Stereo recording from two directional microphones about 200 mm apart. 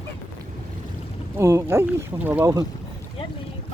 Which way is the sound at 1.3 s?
15° right (ahead or behind).